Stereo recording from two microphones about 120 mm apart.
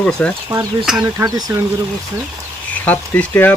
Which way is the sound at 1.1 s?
25° right (ahead or behind).